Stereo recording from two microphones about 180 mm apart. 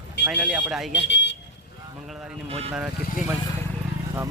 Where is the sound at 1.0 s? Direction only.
80° left.